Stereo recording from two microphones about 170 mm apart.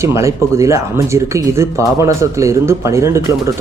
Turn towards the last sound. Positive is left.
turn(degrees=-15)  # may be behind; listen again after turning